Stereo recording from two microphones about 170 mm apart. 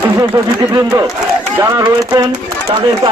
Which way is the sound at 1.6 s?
20° right (ahead or behind).